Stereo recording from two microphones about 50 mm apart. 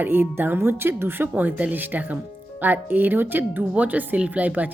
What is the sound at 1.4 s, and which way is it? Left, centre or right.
Speech, right.